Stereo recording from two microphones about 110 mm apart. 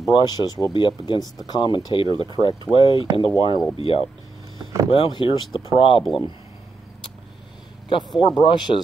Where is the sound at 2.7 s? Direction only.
55° left (ahead or behind).